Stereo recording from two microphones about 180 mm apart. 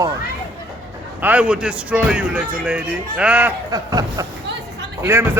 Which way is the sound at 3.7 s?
20° right (ahead or behind).